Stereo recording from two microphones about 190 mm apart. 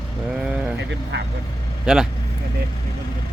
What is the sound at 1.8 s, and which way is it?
Speech, 5° right (ahead or behind).